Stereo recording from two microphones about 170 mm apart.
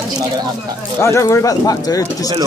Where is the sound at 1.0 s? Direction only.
15° left (ahead or behind).